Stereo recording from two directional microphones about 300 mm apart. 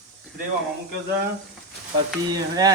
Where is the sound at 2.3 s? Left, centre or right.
Centre.